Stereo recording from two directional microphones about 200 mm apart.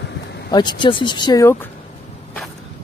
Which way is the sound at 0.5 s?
20° left (ahead or behind).